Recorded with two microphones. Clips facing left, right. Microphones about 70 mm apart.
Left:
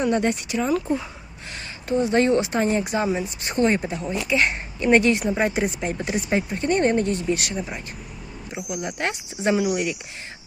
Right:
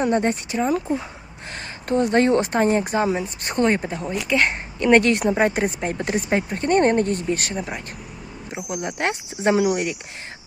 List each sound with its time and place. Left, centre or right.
0.0 s speech: right
1.5 s speech: right
4.3 s speech: right
8.7 s speech: right